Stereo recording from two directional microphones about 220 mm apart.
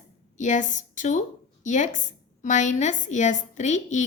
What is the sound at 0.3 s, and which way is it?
A woman's voice, 35° left (ahead or behind).